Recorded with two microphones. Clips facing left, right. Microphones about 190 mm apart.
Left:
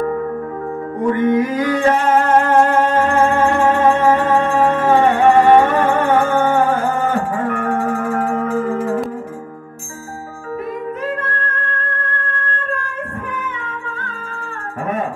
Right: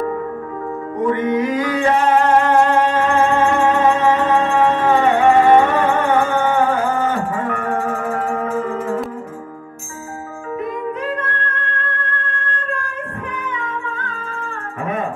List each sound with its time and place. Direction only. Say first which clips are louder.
1.0 s music: left 2 dB; 40° left (ahead or behind)